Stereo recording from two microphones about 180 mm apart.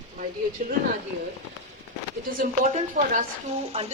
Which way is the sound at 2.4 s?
45° right (ahead or behind).